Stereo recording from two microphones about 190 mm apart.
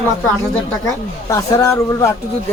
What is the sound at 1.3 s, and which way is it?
Speech, 15° left (ahead or behind).